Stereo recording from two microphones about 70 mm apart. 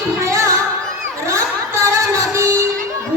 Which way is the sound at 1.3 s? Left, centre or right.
Right.